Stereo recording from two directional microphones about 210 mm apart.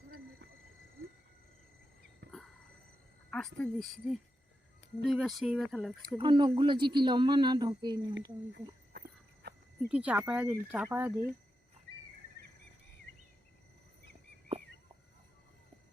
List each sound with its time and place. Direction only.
2.2 s a sound: 55° right (ahead or behind)
3.2 s speech: 5° left (ahead or behind)
6.0 s speech: 20° right (ahead or behind)
8.9 s a sound: 50° right (ahead or behind)
9.9 s speech: 5° right (ahead or behind)
14.5 s fowl: 25° right (ahead or behind)